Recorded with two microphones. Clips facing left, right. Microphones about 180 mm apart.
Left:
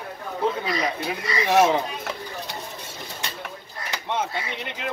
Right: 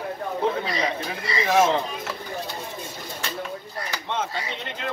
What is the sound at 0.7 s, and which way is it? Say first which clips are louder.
Speech: left 1 dB; 25° right (ahead or behind).